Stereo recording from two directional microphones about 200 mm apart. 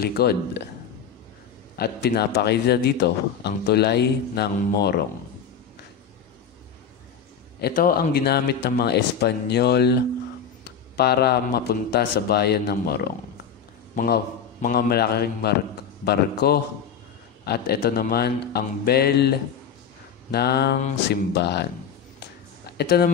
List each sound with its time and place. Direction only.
0.0 s a man's voice: 50° left (ahead or behind)
1.8 s a man's voice: 55° left (ahead or behind)
7.6 s a man's voice: 45° left (ahead or behind)
22.7 s speech: 50° left (ahead or behind)